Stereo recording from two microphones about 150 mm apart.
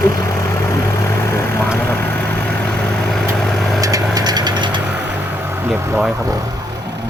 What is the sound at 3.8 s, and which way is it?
Vehicle, 25° right (ahead or behind).